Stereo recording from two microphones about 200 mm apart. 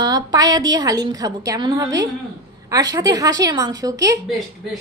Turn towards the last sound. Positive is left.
turn(degrees=0)  # may be behind; listen again after turning